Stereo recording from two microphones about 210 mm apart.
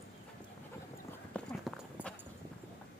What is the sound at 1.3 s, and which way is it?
Clip-clop, 5° left (ahead or behind).